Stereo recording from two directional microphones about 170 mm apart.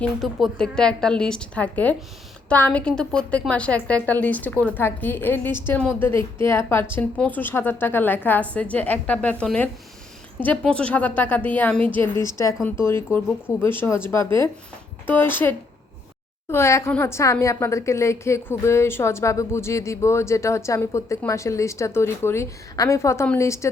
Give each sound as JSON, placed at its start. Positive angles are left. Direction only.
{"t": 0.0, "sound": "a woman's voice", "side_deg": 0}
{"t": 15.0, "sound": "a woman's voice", "side_deg": 10}